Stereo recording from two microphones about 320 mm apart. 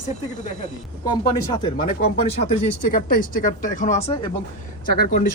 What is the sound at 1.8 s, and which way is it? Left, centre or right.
Speech, left.